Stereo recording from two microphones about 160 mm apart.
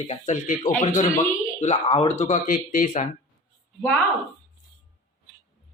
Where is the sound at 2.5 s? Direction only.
55° left (ahead or behind).